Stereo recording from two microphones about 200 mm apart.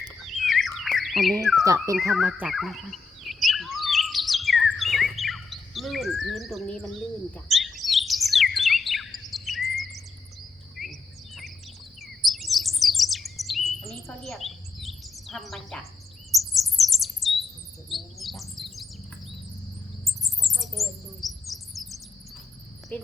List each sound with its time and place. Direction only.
0.2 s bird: centre (ahead or behind)
1.6 s a sound: 15° right (ahead or behind)
2.1 s bird: 5° right (ahead or behind)
10.8 s bird vocalization: centre (ahead or behind)
12.0 s chirp: centre (ahead or behind)
16.3 s bird: centre (ahead or behind)
17.8 s chirp: centre (ahead or behind)
20.1 s a sound: centre (ahead or behind)
22.9 s speech: 5° left (ahead or behind)